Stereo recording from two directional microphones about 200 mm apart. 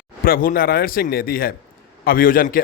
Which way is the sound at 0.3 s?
45° left (ahead or behind).